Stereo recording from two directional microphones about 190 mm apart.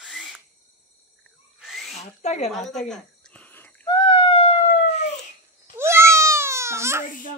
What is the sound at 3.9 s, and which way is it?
Police car, 25° left (ahead or behind).